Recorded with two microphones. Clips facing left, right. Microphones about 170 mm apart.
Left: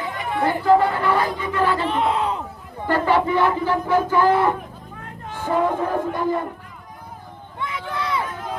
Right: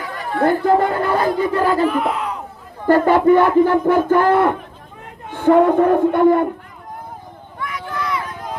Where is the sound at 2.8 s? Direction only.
45° right (ahead or behind).